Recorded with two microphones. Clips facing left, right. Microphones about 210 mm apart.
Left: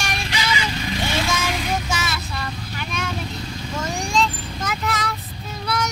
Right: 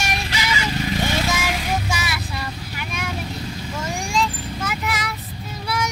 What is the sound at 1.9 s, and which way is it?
Vehicle, 10° right (ahead or behind).